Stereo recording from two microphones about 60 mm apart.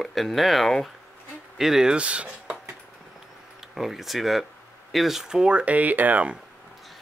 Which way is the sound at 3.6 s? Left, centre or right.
Centre.